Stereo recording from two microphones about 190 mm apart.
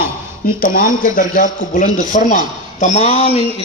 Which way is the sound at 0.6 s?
45° left (ahead or behind).